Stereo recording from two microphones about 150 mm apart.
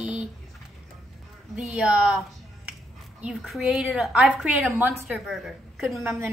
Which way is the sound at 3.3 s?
Centre (ahead or behind).